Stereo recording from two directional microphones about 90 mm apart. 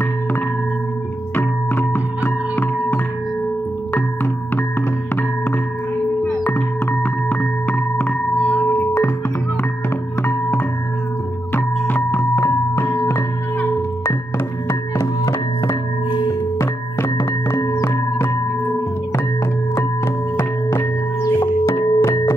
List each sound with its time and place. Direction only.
1.3 s music: 20° left (ahead or behind)
6.2 s music: 25° left (ahead or behind)
11.5 s music: 25° left (ahead or behind)
14.7 s music: 35° left (ahead or behind)
16.1 s singing bowl: 60° left (ahead or behind)
16.5 s music: 30° left (ahead or behind)
20.3 s music: 30° left (ahead or behind)